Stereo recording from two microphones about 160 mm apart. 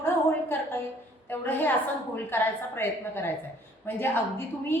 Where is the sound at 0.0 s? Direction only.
15° left (ahead or behind).